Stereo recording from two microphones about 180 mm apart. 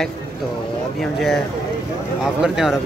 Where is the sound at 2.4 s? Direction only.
Centre (ahead or behind).